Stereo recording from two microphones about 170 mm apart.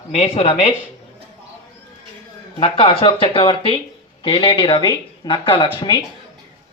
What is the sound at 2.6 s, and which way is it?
Speech, 35° left (ahead or behind).